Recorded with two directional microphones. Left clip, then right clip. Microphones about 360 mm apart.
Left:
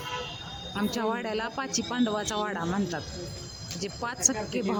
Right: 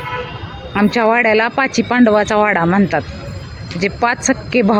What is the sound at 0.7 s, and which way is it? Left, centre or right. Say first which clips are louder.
Speech: right 17 dB; left.